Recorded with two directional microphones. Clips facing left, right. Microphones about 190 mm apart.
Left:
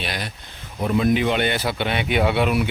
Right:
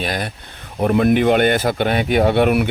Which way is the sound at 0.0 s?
50° right (ahead or behind).